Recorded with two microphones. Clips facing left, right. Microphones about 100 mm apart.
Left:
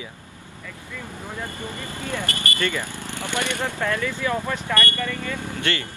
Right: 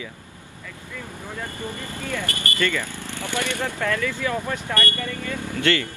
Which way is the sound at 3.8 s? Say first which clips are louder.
Right 1 dB; 35° left (ahead or behind).